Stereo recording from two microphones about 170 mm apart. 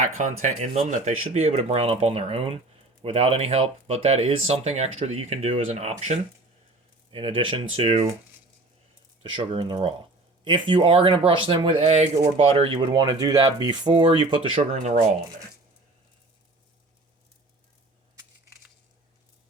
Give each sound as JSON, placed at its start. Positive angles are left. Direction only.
{"t": 0.2, "sound": "speech", "side_deg": -45}
{"t": 9.3, "sound": "speech", "side_deg": -30}
{"t": 14.8, "sound": "speech", "side_deg": -50}